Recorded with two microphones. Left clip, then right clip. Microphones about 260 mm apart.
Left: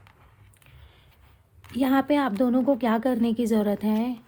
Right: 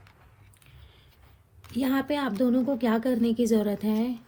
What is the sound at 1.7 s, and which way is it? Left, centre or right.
Speech, left.